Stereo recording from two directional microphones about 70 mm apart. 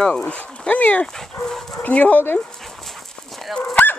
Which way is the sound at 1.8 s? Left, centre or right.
Left.